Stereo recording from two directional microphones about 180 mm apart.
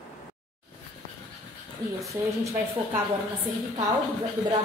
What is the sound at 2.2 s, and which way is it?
Speech, 15° right (ahead or behind).